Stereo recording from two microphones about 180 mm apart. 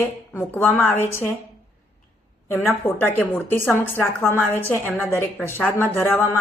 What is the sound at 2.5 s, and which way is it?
A woman's voice, 10° left (ahead or behind).